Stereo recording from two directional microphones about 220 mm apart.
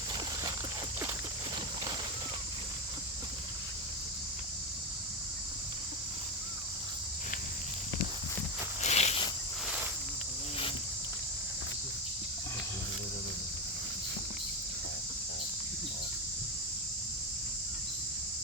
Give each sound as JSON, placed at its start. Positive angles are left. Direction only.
{"t": 8.8, "sound": "cricket", "side_deg": 30}